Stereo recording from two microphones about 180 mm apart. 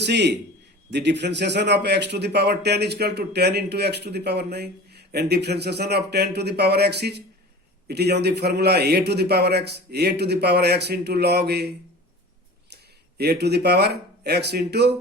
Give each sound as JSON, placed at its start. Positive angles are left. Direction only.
{"t": 0.0, "sound": "a man's voice", "side_deg": -70}
{"t": 12.7, "sound": "speech", "side_deg": -65}